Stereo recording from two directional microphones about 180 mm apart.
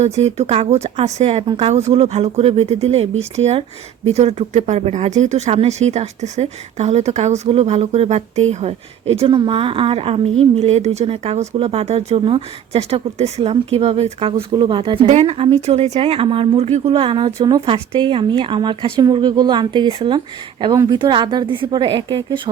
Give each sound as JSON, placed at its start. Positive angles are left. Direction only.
{"t": 0.0, "sound": "speech", "side_deg": -35}